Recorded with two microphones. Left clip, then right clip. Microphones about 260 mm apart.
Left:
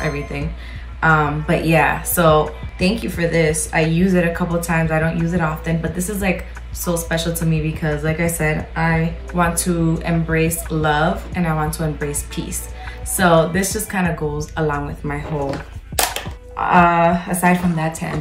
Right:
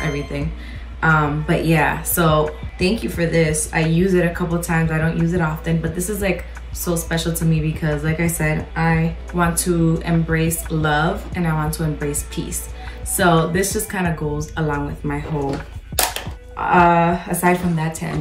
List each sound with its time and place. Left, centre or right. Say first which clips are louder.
0.0 s music: left 1 dB; centre
1.0 s a woman's voice: left 2 dB; centre
15.9 s music: left 1 dB; centre
16.5 s speech: even; centre